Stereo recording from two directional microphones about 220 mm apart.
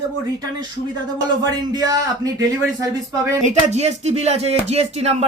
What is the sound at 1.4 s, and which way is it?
Speech, 20° right (ahead or behind).